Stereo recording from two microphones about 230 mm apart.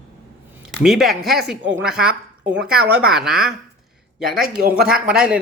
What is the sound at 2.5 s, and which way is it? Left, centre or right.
Speech, centre.